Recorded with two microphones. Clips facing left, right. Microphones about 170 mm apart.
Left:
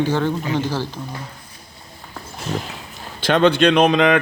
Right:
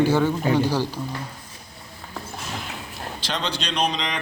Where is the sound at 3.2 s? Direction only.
55° left (ahead or behind).